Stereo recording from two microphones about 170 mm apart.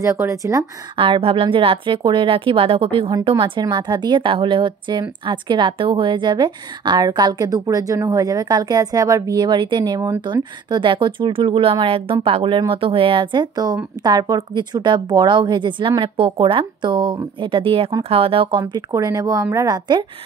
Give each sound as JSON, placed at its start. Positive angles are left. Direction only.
{"t": 0.0, "sound": "a woman's voice", "side_deg": -15}
{"t": 0.9, "sound": "a woman's voice", "side_deg": -30}
{"t": 18.6, "sound": "a woman's voice", "side_deg": -20}